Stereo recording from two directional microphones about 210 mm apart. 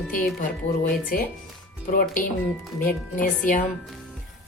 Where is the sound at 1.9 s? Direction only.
40° left (ahead or behind).